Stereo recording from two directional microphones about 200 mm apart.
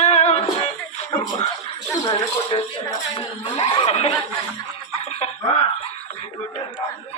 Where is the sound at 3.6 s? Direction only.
30° left (ahead or behind).